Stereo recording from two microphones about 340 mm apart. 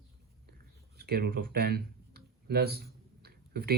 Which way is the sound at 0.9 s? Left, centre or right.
Right.